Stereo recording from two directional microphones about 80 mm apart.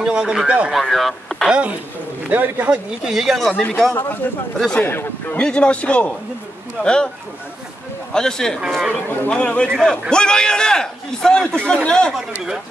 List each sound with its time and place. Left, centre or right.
0.0 s speech: centre
0.7 s speech: centre
1.5 s speech: centre
2.7 s speech: centre
3.5 s a man's voice: centre
5.4 s a man's voice: centre
8.1 s a man's voice: centre
8.5 s speech: centre
9.3 s a man's voice: centre